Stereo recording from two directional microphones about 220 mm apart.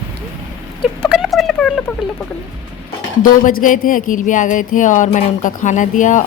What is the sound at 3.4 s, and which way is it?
Speech, 35° left (ahead or behind).